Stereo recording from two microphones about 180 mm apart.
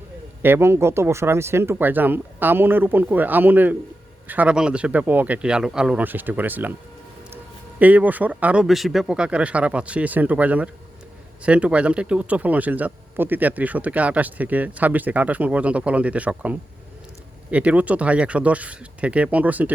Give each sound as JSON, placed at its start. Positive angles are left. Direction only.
{"t": 0.4, "sound": "speech", "side_deg": -15}
{"t": 7.8, "sound": "speech", "side_deg": -10}